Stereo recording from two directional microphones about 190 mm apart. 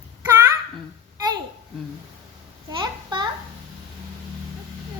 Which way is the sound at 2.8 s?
25° right (ahead or behind).